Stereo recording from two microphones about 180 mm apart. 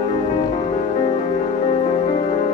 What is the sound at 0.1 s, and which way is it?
Music, 30° left (ahead or behind).